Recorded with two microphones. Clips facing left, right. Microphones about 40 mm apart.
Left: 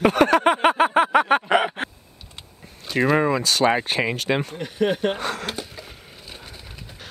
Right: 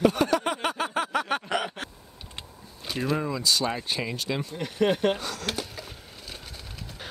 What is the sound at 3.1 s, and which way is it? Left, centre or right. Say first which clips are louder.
Speech: left 7 dB; left.